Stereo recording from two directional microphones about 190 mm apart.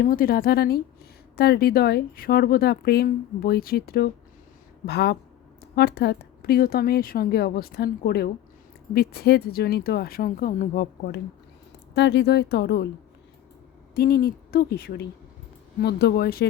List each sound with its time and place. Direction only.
0.0 s a woman's voice: 50° left (ahead or behind)
11.9 s speech: 65° left (ahead or behind)
13.9 s speech: 55° left (ahead or behind)